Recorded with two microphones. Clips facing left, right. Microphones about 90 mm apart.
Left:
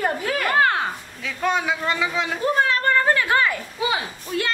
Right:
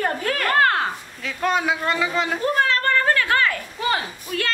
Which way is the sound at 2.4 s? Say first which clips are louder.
Left 2 dB; 15° left (ahead or behind).